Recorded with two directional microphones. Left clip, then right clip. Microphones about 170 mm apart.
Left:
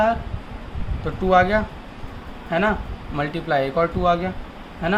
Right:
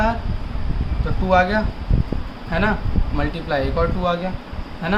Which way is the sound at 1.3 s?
35° left (ahead or behind).